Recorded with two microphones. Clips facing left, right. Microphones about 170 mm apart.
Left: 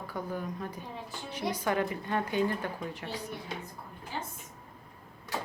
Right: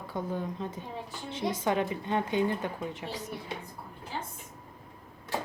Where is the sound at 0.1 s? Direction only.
25° right (ahead or behind).